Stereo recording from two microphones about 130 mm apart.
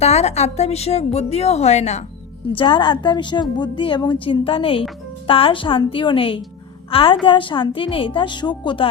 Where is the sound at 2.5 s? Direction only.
40° left (ahead or behind).